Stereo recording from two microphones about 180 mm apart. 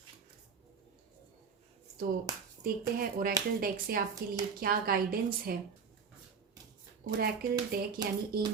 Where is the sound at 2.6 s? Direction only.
55° right (ahead or behind).